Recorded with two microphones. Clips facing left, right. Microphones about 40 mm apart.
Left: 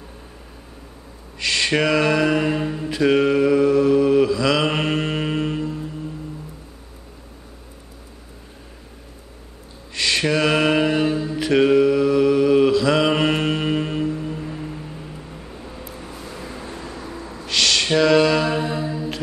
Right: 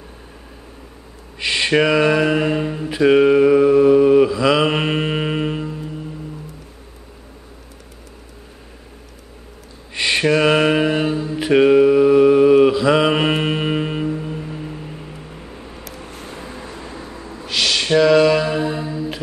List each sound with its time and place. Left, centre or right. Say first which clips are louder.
1.4 s a sound: right 1 dB; right
1.7 s mantra: right 4 dB; centre
9.9 s mantra: right 3 dB; right
11.3 s mantra: right 4 dB; centre
16.1 s vehicle: right 1 dB; right
16.5 s vehicle: even; centre
16.8 s vehicle: even; right
17.5 s mantra: right 1 dB; centre